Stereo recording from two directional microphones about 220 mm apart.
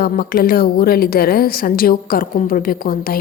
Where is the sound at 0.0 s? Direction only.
40° left (ahead or behind).